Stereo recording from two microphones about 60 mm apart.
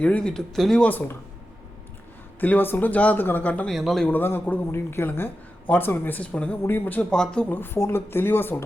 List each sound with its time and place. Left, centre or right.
0.0 s speech: centre
0.5 s speech: centre
0.8 s speech: left
2.4 s speech: left
3.7 s speech: centre
4.1 s a woman's voice: left
5.6 s speech: left
6.6 s speech: left
7.1 s speech: centre
7.4 s speech: left